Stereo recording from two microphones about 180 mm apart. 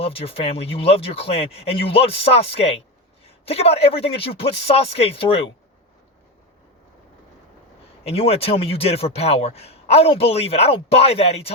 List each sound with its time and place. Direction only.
0.0 s speech: 30° left (ahead or behind)
8.0 s speech: 35° left (ahead or behind)